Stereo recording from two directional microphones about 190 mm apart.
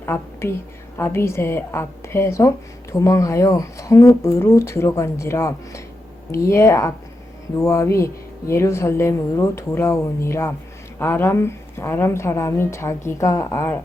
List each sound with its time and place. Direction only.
0.0 s speech: 15° left (ahead or behind)